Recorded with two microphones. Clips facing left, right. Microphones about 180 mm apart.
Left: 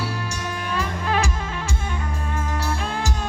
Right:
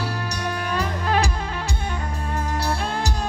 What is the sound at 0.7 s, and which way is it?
Music, 40° right (ahead or behind).